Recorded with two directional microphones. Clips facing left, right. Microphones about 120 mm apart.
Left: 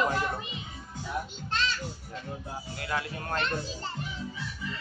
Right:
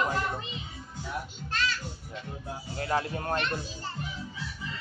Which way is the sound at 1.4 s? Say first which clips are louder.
Even; 25° left (ahead or behind).